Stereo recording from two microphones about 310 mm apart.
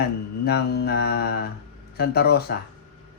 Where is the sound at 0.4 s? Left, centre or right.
Left.